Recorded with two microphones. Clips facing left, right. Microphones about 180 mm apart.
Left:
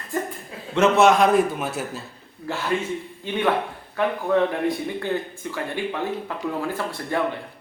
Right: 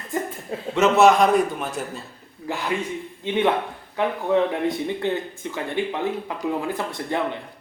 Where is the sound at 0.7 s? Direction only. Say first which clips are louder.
Right 1 dB; centre (ahead or behind).